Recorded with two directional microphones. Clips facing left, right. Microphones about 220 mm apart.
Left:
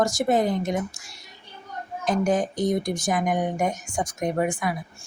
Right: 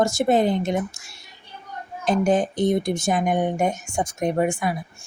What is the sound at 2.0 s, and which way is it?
Speech, 30° right (ahead or behind).